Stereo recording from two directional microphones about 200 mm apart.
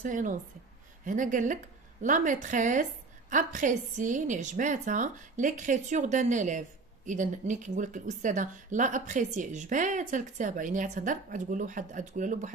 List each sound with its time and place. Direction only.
0.0 s a woman's voice: 40° right (ahead or behind)